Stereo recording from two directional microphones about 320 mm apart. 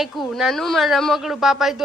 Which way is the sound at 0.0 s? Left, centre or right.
Centre.